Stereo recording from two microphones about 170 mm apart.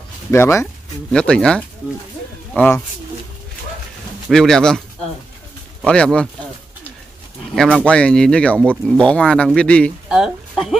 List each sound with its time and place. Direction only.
0.3 s speech: 15° left (ahead or behind)
1.1 s speech: 5° left (ahead or behind)
4.3 s speech: 5° left (ahead or behind)
5.9 s speech: 5° left (ahead or behind)
7.8 s speech: 5° left (ahead or behind)
10.0 s a sound: 5° right (ahead or behind)